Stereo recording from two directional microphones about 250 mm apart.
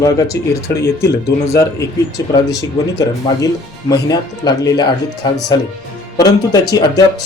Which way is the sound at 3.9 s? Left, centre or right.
Centre.